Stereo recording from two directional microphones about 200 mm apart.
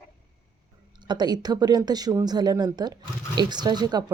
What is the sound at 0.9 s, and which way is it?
A woman's voice, 20° right (ahead or behind).